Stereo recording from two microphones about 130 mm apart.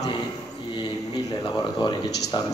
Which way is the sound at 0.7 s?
35° left (ahead or behind).